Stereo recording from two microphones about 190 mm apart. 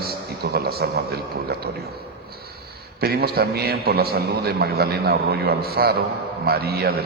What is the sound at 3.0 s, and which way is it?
A man's voice, 55° right (ahead or behind).